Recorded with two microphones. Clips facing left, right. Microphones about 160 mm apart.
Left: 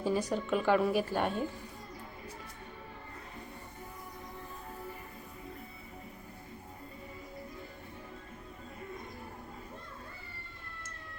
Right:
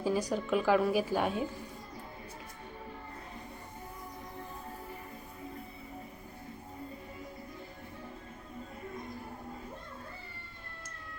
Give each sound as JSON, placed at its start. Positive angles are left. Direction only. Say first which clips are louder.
{"t": 0.0, "sound": "a woman's voice", "louder": "even", "side_deg": 0}